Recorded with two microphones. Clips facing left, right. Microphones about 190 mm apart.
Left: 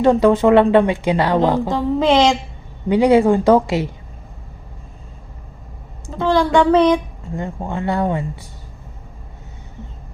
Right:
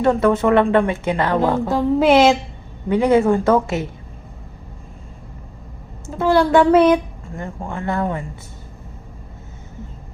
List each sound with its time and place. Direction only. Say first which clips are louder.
0.0 s speech: left 3 dB; 15° left (ahead or behind)
1.7 s speech: right 1 dB; 5° right (ahead or behind)
2.9 s speech: left 2 dB; 15° left (ahead or behind)
6.1 s speech: right 1 dB; 10° right (ahead or behind)
7.3 s speech: left 4 dB; 20° left (ahead or behind)